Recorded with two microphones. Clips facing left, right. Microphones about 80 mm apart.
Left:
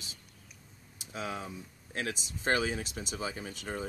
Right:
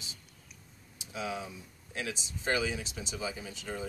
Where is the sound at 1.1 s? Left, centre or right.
Left.